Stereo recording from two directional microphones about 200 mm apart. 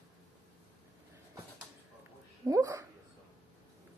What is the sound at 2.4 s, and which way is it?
Speech, 15° right (ahead or behind).